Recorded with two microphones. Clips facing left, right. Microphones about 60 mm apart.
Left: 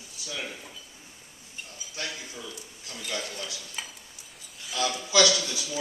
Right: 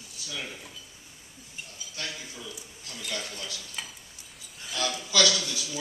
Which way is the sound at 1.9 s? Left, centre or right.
Centre.